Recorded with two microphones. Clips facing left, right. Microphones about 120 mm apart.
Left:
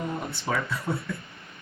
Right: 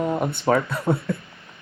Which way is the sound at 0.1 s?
60° right (ahead or behind).